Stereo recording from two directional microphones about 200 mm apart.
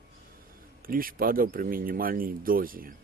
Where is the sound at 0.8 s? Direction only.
45° right (ahead or behind).